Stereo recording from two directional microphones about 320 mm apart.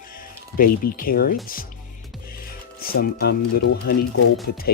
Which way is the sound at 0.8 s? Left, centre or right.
Left.